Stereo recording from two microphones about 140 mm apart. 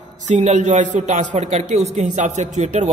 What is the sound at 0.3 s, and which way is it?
A man's voice, 60° right (ahead or behind).